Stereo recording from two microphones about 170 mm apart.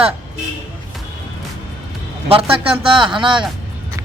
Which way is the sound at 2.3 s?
35° right (ahead or behind).